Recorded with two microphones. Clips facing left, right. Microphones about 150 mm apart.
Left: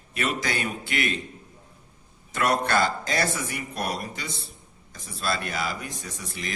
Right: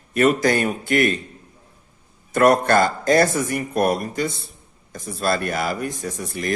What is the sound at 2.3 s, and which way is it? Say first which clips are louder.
A man's voice: right 8 dB; 50° right (ahead or behind).